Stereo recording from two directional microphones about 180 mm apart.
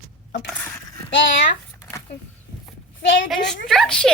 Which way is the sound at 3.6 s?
Centre (ahead or behind).